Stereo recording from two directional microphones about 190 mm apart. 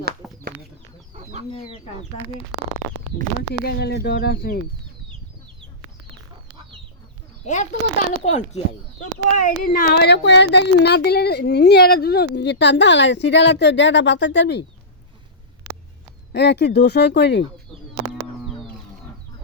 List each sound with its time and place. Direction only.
0.2 s a sound: centre (ahead or behind)
1.1 s chicken: 35° right (ahead or behind)
1.5 s speech: 25° left (ahead or behind)
3.6 s speech: 55° left (ahead or behind)
7.4 s a child's voice: 40° left (ahead or behind); by 14.6 s 65° left (ahead or behind)
16.3 s speech: 65° left (ahead or behind)